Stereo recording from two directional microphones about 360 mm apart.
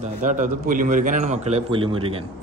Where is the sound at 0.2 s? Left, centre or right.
Right.